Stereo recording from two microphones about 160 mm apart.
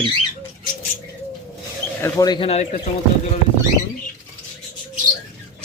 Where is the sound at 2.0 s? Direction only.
20° left (ahead or behind).